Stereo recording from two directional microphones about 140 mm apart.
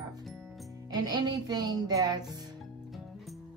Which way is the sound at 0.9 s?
30° right (ahead or behind).